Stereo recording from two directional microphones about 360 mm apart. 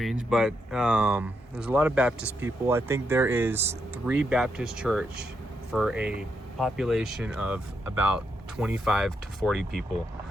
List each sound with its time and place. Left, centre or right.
0.0 s speech: centre